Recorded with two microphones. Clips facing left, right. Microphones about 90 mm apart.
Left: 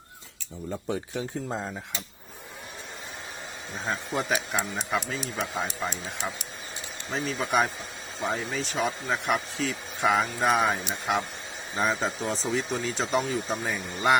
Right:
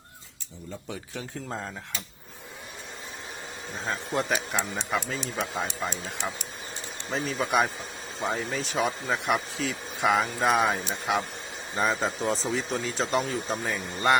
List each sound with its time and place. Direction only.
1.1 s speech: 15° left (ahead or behind)
3.8 s speech: 5° left (ahead or behind)